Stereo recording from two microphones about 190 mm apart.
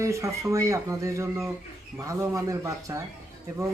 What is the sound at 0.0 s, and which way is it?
Speech, 15° right (ahead or behind).